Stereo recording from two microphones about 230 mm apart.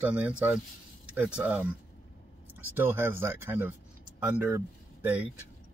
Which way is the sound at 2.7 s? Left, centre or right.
Centre.